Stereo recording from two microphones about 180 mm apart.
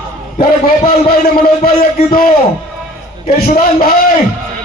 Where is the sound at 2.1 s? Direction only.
55° left (ahead or behind).